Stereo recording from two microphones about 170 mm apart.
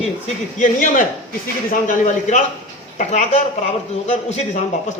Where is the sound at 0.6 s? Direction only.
50° left (ahead or behind).